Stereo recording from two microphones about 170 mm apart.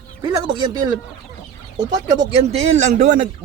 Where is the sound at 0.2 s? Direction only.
25° right (ahead or behind).